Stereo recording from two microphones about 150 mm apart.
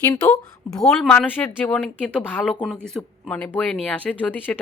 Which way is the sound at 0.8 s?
5° left (ahead or behind).